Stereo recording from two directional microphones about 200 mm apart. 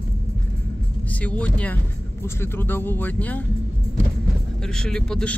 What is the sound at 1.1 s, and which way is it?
Speech, 5° left (ahead or behind).